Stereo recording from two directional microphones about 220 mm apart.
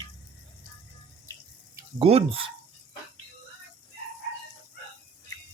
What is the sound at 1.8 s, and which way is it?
Speech, 20° right (ahead or behind).